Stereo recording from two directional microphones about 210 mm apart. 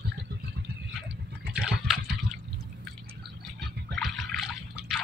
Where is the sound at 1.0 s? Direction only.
5° right (ahead or behind).